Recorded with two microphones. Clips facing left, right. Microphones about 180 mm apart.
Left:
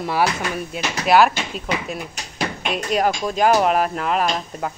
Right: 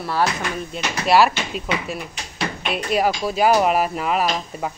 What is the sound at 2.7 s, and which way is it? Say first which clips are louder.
Speech: even; 5° right (ahead or behind).